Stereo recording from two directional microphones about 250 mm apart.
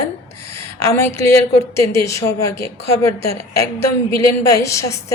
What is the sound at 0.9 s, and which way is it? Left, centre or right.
A woman's voice, centre.